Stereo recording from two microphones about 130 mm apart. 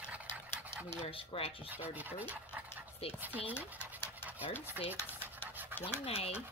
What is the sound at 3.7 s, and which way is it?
Dog, 10° right (ahead or behind).